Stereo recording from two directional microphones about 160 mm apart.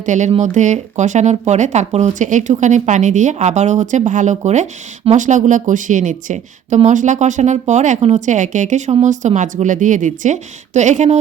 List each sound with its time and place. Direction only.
0.0 s speech: 50° right (ahead or behind)